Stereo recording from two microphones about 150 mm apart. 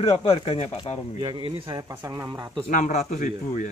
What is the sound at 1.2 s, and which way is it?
Speech, 30° right (ahead or behind).